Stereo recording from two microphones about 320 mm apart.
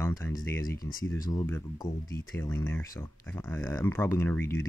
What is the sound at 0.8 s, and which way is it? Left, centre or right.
Speech, left.